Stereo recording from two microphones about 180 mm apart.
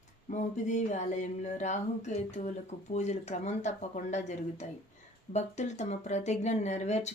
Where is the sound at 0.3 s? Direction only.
45° left (ahead or behind).